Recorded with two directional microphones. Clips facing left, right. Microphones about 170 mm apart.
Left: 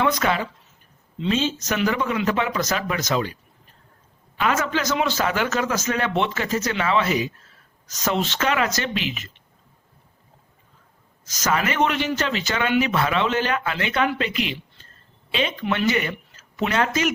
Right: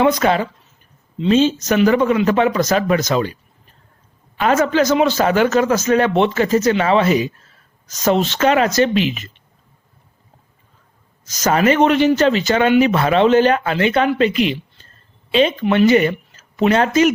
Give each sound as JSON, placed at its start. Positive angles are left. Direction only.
{"t": 0.0, "sound": "speech", "side_deg": -30}
{"t": 4.4, "sound": "speech", "side_deg": -40}
{"t": 11.4, "sound": "speech", "side_deg": -30}
{"t": 15.9, "sound": "speech", "side_deg": -35}